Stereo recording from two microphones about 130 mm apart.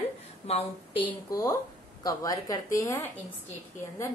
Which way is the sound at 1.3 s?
25° left (ahead or behind).